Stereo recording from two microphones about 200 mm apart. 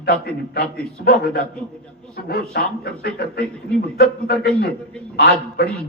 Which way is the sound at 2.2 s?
50° left (ahead or behind).